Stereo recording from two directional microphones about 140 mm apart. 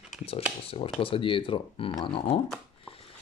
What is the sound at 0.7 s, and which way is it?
Speech, 40° left (ahead or behind).